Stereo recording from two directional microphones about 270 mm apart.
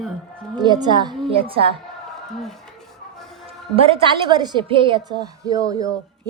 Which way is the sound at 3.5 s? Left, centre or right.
Right.